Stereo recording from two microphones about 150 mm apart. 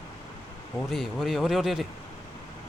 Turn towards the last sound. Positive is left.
turn(degrees=0)  # may be behind; listen again after turning